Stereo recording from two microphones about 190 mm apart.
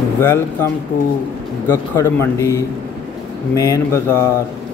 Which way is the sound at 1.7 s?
15° left (ahead or behind).